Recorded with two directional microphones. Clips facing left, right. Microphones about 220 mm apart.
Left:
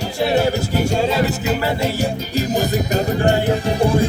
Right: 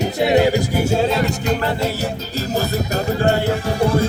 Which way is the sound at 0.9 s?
Centre (ahead or behind).